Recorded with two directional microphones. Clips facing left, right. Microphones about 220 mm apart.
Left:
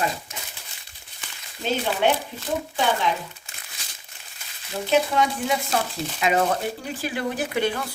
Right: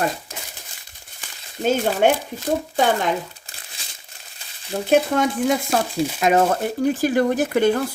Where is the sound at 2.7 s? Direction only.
45° right (ahead or behind).